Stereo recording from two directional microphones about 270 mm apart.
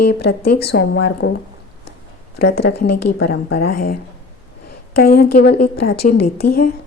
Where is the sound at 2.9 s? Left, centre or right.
Left.